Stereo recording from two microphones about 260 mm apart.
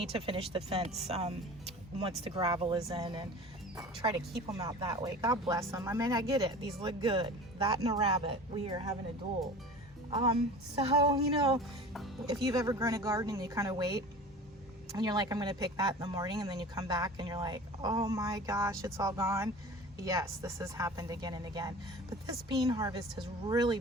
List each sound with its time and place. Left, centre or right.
0.0 s speech: right
10.1 s speech: right